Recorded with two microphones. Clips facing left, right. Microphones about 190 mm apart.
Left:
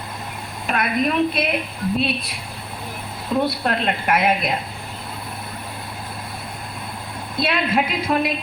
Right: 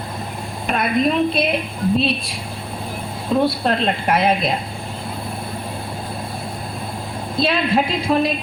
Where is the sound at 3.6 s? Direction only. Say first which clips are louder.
Right 3 dB; 30° right (ahead or behind).